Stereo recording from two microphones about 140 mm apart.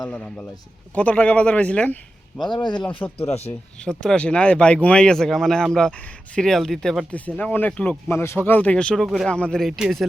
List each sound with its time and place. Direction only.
0.1 s speech: 5° left (ahead or behind)
2.4 s speech: 30° left (ahead or behind)
3.8 s speech: 5° left (ahead or behind)